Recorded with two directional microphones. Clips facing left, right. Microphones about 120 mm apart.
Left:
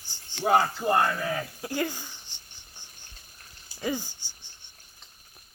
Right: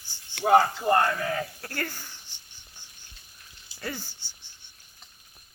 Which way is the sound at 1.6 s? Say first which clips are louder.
Left 5 dB; 15° left (ahead or behind).